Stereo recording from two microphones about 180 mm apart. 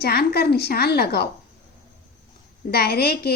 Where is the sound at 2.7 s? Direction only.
60° left (ahead or behind).